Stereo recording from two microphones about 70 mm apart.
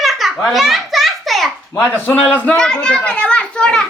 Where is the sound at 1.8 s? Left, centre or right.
Left.